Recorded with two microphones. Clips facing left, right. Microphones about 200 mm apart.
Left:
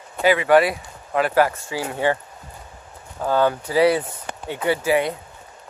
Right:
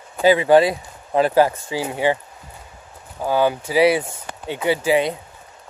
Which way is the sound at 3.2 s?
10° right (ahead or behind).